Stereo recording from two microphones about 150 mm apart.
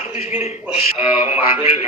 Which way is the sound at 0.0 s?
40° left (ahead or behind).